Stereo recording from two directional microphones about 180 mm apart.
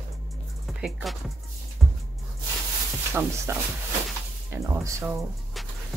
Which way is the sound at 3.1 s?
10° right (ahead or behind).